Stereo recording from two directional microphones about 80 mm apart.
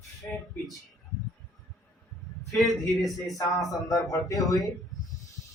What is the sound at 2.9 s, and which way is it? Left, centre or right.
Speech, centre.